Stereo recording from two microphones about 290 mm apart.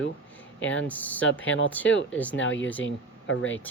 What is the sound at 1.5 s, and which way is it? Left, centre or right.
Speech, left.